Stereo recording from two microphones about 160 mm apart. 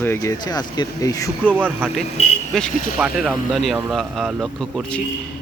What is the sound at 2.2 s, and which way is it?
Speech, 40° left (ahead or behind).